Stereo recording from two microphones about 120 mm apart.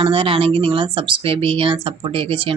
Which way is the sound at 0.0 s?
50° right (ahead or behind).